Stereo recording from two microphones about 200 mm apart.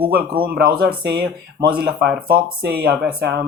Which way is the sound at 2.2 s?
50° right (ahead or behind).